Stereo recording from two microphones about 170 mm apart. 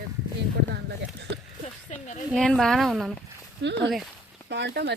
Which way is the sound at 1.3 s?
90° right.